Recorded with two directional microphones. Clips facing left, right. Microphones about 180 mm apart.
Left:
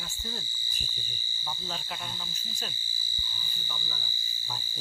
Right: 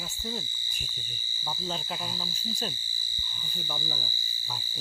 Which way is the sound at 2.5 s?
35° right (ahead or behind).